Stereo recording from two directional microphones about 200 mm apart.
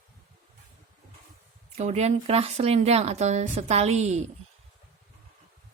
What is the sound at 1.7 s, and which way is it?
Speech, 30° right (ahead or behind).